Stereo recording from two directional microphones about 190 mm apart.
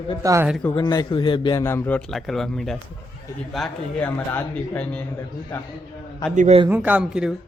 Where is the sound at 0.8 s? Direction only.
25° left (ahead or behind); by 5.0 s 5° left (ahead or behind).